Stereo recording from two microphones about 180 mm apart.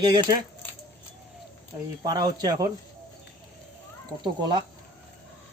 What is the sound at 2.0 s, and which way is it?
Speech, 25° right (ahead or behind).